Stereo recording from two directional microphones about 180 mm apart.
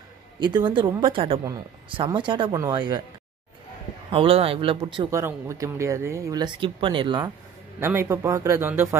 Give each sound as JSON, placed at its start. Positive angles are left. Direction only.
{"t": 0.4, "sound": "speech", "side_deg": -25}
{"t": 4.1, "sound": "speech", "side_deg": -30}
{"t": 5.1, "sound": "speech", "side_deg": -15}
{"t": 7.8, "sound": "speech", "side_deg": -15}